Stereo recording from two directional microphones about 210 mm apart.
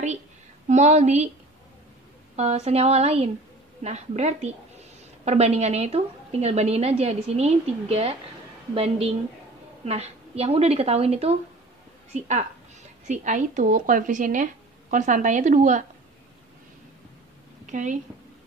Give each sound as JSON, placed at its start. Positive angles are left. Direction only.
{"t": 0.7, "sound": "a woman's voice", "side_deg": -35}
{"t": 2.3, "sound": "a woman's voice", "side_deg": -30}
{"t": 17.6, "sound": "speech", "side_deg": -35}